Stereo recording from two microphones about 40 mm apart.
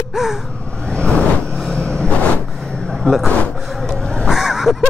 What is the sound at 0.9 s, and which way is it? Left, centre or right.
Vehicle, left.